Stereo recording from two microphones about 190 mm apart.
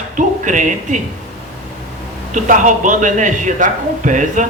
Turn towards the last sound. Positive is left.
turn(degrees=-40)  # may be behind; listen again after turning